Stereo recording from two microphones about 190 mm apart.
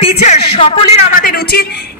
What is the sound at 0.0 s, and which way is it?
Music, 35° left (ahead or behind).